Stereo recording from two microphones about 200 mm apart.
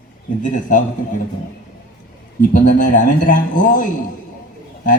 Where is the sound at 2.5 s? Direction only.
40° left (ahead or behind).